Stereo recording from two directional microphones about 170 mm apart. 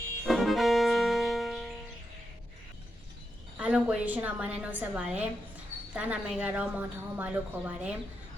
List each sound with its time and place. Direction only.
0.3 s music: centre (ahead or behind)
3.6 s a woman's voice: 5° right (ahead or behind)